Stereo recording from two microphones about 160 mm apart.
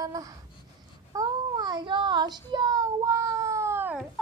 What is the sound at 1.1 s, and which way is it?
Child singing, 25° right (ahead or behind).